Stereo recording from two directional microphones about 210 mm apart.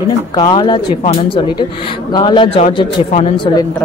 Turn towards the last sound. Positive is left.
turn(degrees=30)  # may be behind; listen again after turning